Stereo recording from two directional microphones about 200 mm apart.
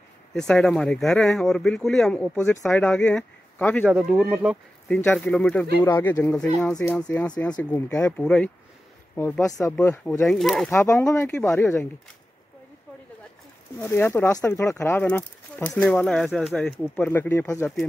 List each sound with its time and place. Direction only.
0.3 s speech: 5° left (ahead or behind)
3.9 s speech: 5° right (ahead or behind)
4.8 s speech: 5° left (ahead or behind)
10.2 s speech: centre (ahead or behind)
10.7 s speech: 15° left (ahead or behind)
13.7 s speech: 10° left (ahead or behind)